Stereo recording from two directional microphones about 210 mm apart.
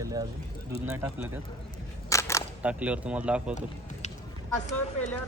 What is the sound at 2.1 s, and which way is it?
Single-lens reflex camera, 15° left (ahead or behind).